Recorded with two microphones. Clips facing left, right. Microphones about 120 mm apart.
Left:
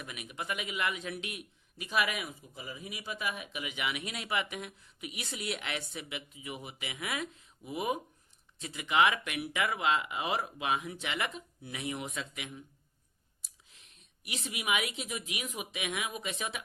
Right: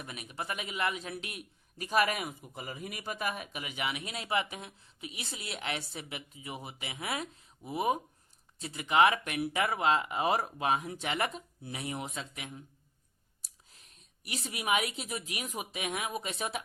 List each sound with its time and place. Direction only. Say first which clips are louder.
0.0 s a man's voice: right 1 dB; 35° right (ahead or behind)
13.7 s a woman's voice: right 2 dB; 40° right (ahead or behind)